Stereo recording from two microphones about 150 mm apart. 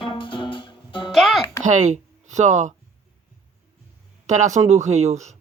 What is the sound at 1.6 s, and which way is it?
Speech, 55° right (ahead or behind).